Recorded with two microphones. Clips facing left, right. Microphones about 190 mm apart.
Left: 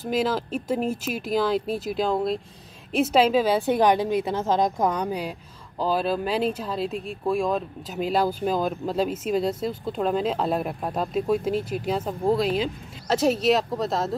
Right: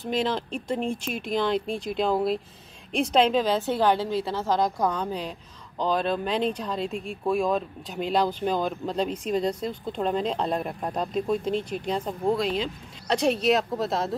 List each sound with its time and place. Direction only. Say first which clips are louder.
0.0 s a woman's voice: left 2 dB; 5° left (ahead or behind)